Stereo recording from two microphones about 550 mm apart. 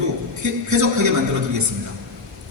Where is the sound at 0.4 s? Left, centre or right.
Right.